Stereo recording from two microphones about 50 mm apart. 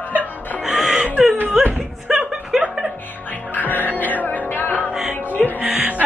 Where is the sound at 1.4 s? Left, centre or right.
Right.